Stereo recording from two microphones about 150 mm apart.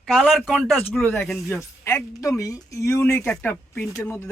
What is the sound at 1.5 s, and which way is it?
Speech, 15° left (ahead or behind).